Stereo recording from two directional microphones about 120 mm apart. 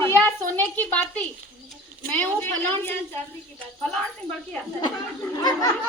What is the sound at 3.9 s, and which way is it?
Speech, 5° left (ahead or behind).